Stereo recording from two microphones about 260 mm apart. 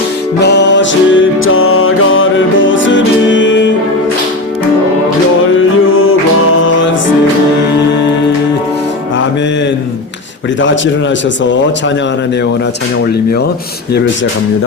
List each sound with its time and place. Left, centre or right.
0.4 s music: left